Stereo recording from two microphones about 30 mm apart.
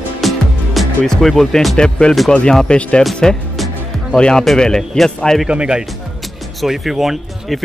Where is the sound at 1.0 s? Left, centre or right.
Centre.